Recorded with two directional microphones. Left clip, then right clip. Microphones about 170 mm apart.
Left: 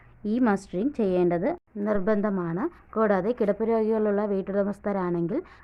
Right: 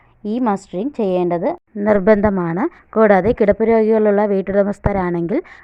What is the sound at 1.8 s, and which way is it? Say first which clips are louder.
A woman's voice: right 13 dB; 40° right (ahead or behind).